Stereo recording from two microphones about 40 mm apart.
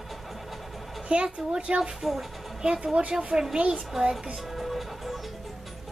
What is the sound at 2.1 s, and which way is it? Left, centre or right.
Speech, centre.